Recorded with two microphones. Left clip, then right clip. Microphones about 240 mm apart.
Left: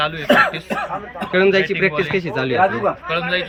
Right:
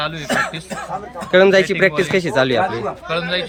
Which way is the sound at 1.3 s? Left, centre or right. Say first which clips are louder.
Right 4 dB; centre.